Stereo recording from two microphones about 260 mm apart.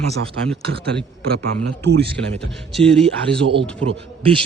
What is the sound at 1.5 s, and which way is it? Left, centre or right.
Speech, right.